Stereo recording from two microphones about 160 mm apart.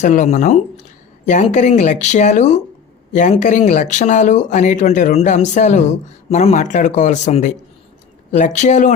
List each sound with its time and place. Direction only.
0.0 s speech: 50° left (ahead or behind)